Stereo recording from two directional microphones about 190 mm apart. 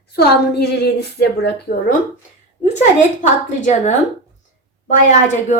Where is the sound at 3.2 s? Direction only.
40° left (ahead or behind).